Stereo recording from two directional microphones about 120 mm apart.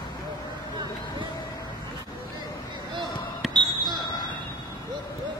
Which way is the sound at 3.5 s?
40° right (ahead or behind).